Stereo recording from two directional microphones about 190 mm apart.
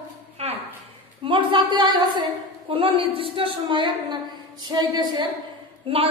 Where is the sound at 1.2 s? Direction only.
25° right (ahead or behind).